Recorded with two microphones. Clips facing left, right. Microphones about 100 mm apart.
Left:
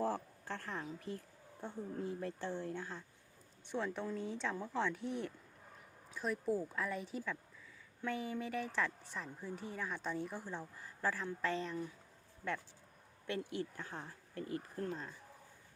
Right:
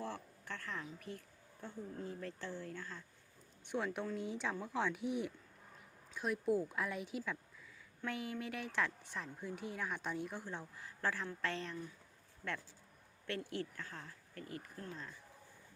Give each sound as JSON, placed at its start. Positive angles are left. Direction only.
{"t": 0.0, "sound": "a sound", "side_deg": 35}
{"t": 0.9, "sound": "speech", "side_deg": 30}
{"t": 3.7, "sound": "a woman's voice", "side_deg": -5}
{"t": 13.6, "sound": "speech", "side_deg": 20}